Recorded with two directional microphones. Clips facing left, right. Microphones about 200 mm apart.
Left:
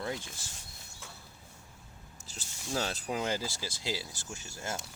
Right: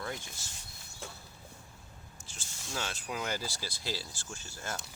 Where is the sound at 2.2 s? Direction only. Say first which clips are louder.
Left 6 dB; 40° left (ahead or behind); by 4.8 s 20° left (ahead or behind).